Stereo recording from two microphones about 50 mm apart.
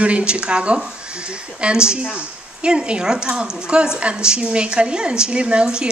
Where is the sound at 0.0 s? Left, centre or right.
Right.